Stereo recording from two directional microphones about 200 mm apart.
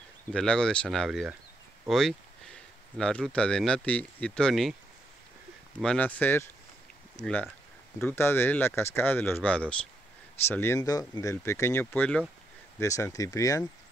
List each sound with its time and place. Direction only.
0.3 s speech: 5° left (ahead or behind)
5.8 s speech: 5° left (ahead or behind)